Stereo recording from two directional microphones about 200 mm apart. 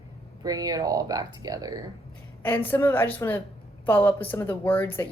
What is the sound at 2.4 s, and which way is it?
Speech, 10° left (ahead or behind).